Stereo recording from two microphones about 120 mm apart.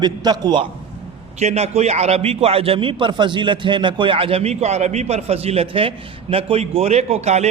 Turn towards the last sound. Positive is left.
turn(degrees=-65)  # may be behind; listen again after turning